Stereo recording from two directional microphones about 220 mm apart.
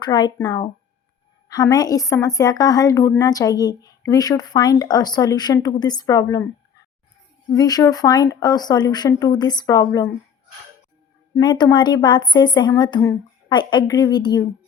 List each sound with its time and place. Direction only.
0.0 s a woman's voice: 20° left (ahead or behind)
7.5 s a woman's voice: 15° left (ahead or behind)
11.3 s a woman's voice: 20° left (ahead or behind)